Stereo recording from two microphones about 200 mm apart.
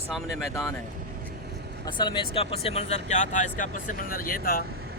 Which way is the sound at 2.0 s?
25° left (ahead or behind).